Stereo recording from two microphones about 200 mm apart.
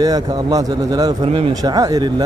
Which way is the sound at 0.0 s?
20° right (ahead or behind).